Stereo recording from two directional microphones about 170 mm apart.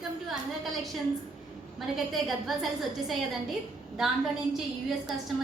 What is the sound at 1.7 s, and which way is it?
A woman's voice, centre (ahead or behind).